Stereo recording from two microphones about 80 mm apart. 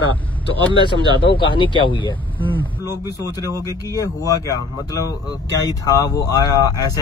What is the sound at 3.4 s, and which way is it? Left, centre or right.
Speech, right.